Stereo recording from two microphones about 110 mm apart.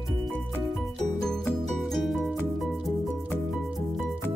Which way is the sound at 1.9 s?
Centre (ahead or behind).